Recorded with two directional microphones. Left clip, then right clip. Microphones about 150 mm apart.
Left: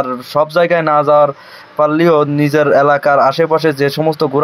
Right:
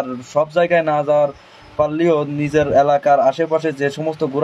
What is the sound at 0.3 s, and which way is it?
Speech, 30° left (ahead or behind).